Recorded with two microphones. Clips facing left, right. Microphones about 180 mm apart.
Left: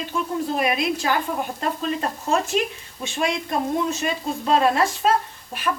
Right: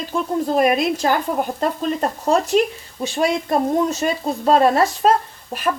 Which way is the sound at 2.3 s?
40° right (ahead or behind).